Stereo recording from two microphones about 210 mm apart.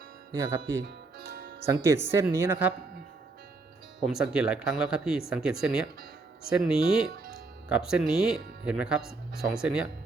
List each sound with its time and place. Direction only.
0.3 s speech: 15° right (ahead or behind)
0.8 s music: 50° right (ahead or behind)
1.6 s speech: 15° right (ahead or behind)
4.0 s speech: centre (ahead or behind)